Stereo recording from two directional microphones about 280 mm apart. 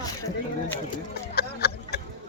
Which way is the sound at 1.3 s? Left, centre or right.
Left.